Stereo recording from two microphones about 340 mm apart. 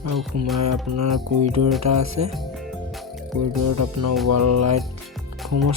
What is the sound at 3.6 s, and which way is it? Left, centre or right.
Speech, right.